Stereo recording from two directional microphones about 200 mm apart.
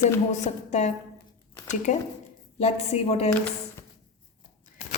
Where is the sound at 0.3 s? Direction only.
35° left (ahead or behind).